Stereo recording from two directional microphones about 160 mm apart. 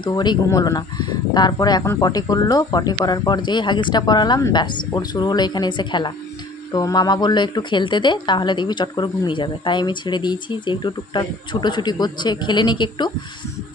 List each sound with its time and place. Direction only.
0.0 s speech: 25° left (ahead or behind)